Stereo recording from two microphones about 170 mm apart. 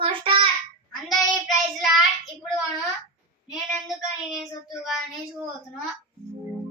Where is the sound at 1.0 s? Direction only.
Centre (ahead or behind).